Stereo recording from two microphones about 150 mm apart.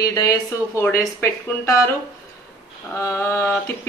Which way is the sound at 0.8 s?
15° left (ahead or behind).